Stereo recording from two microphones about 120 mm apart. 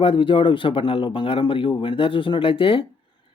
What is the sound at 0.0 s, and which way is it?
Speech, 45° left (ahead or behind).